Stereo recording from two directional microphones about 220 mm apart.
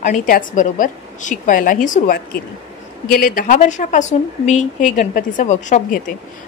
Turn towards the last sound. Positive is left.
turn(degrees=35)  # may be behind; listen again after turning